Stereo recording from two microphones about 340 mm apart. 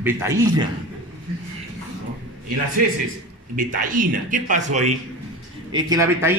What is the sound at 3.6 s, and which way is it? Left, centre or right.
Speech, right.